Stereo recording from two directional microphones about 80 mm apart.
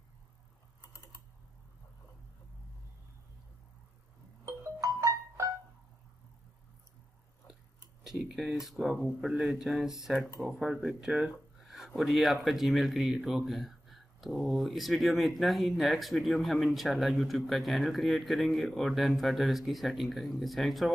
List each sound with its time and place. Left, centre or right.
4.5 s music: right
8.0 s speech: centre